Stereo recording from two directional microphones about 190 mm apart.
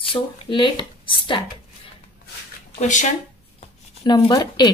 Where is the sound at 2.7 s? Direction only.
40° left (ahead or behind).